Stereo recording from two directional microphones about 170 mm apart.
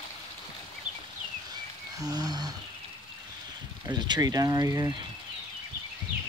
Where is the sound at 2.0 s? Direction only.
20° right (ahead or behind).